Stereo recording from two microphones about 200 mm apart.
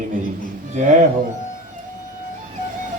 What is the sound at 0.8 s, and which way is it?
Speech, 40° right (ahead or behind).